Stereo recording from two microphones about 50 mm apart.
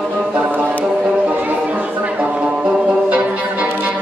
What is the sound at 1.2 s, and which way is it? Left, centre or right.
Music, right.